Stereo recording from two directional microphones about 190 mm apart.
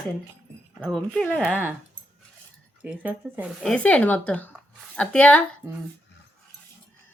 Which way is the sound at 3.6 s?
5° left (ahead or behind).